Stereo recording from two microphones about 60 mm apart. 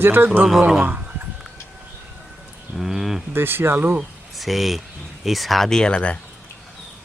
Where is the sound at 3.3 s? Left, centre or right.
Right.